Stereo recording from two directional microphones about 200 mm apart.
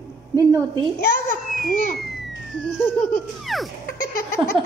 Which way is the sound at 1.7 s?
45° left (ahead or behind).